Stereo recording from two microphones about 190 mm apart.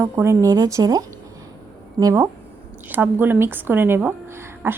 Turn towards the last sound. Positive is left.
turn(degrees=-10)  # may be behind; listen again after turning